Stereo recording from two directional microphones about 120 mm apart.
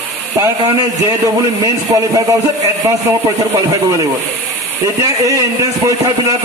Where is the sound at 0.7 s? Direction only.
30° right (ahead or behind).